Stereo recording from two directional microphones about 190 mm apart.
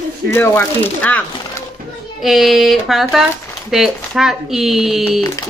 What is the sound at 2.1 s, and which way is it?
Speech, centre (ahead or behind).